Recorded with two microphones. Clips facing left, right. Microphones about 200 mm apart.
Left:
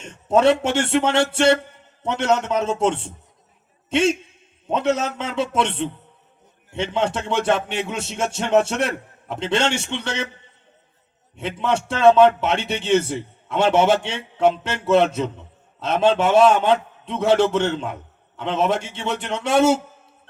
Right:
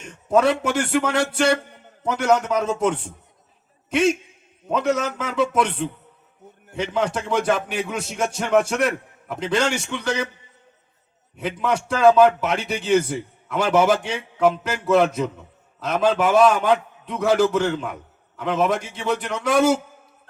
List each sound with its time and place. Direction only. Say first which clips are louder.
0.0 s a man's voice: left 2 dB; 25° left (ahead or behind)
11.3 s a man's voice: left 1 dB; 25° left (ahead or behind)